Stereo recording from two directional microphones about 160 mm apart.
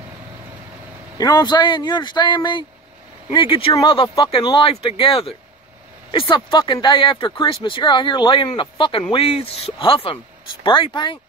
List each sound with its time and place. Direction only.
1.1 s speech: 25° left (ahead or behind)